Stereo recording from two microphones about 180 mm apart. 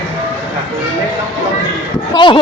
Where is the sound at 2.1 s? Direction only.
25° left (ahead or behind).